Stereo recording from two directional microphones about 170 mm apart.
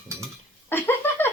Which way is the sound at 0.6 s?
15° left (ahead or behind).